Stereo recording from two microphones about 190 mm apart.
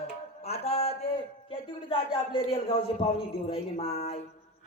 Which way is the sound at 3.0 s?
30° left (ahead or behind).